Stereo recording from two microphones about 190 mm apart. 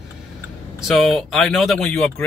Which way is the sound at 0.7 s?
Centre (ahead or behind).